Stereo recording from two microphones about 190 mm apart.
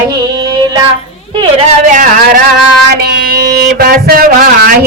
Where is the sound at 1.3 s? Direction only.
25° right (ahead or behind).